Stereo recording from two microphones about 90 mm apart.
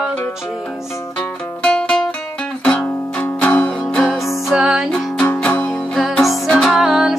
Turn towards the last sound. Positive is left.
turn(degrees=-5)  # may be behind; listen again after turning